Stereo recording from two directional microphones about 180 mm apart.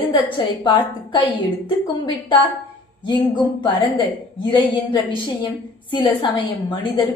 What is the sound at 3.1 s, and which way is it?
A woman's voice, 25° left (ahead or behind).